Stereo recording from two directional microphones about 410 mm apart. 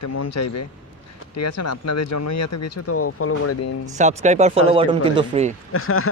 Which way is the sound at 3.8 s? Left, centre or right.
Centre.